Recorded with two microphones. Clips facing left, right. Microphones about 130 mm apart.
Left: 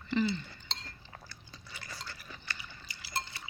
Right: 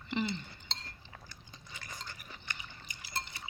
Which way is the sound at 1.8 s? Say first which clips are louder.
Left 1 dB; 15° right (ahead or behind).